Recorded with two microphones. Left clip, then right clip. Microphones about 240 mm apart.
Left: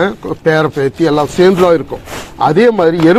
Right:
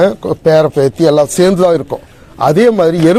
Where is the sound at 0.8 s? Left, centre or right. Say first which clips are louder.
Right 3 dB; right.